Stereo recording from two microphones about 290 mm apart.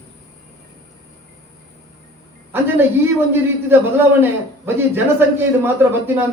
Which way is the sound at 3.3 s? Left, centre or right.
Centre.